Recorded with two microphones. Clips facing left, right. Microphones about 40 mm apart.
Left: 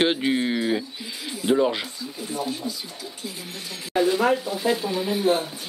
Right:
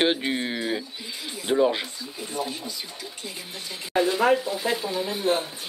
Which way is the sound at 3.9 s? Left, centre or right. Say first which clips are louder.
Even; centre.